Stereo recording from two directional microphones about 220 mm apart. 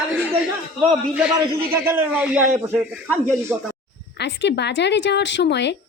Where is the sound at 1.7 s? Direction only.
10° right (ahead or behind).